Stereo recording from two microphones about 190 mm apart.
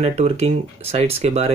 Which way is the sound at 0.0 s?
35° right (ahead or behind).